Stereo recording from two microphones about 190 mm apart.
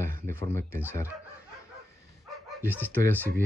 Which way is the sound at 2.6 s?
10° left (ahead or behind).